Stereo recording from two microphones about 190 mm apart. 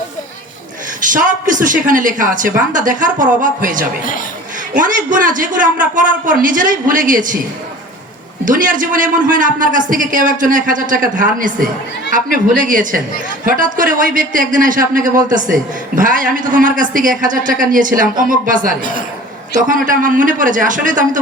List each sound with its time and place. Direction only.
1.0 s a man's voice: 45° right (ahead or behind)
8.4 s a man's voice: 45° right (ahead or behind)